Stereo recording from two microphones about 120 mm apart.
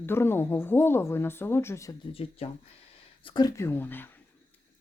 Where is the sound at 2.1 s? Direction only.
55° left (ahead or behind).